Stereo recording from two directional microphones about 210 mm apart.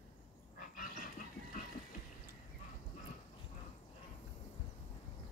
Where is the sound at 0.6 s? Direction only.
40° left (ahead or behind).